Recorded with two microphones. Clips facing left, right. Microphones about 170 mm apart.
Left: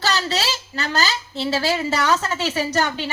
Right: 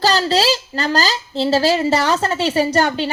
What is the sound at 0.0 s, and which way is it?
Speech, 35° right (ahead or behind).